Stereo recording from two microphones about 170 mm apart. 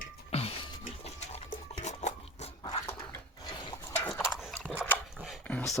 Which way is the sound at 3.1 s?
20° left (ahead or behind).